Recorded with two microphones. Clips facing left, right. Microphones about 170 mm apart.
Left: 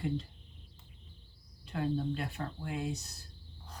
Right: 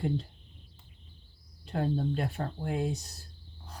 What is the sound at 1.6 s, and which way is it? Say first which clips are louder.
Speech: right 3 dB; 45° right (ahead or behind).